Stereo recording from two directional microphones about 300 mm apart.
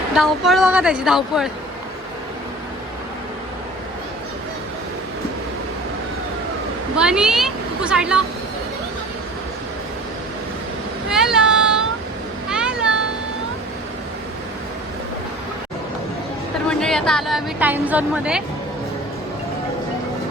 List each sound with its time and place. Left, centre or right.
0.1 s speech: centre
6.9 s speech: centre
11.1 s a sound: centre
16.6 s a woman's voice: centre